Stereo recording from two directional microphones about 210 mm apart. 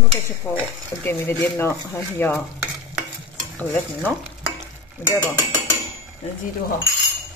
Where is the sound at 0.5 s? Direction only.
5° left (ahead or behind).